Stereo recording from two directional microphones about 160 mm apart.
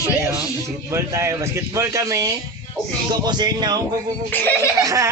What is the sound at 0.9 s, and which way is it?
Speech, 20° right (ahead or behind).